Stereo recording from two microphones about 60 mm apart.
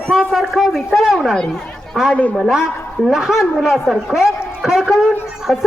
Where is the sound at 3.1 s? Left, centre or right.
Centre.